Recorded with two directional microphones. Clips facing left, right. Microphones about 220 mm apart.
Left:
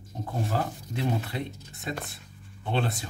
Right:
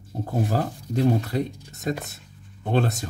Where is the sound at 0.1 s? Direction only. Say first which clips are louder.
Right 5 dB; 40° right (ahead or behind).